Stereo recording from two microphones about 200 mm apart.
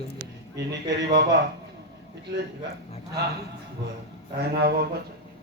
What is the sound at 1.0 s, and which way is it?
Speech, 60° right (ahead or behind).